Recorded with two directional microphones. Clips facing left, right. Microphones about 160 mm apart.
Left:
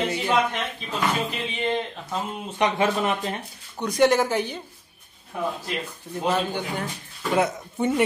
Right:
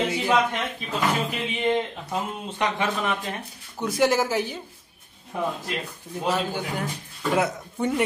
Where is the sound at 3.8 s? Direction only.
5° right (ahead or behind).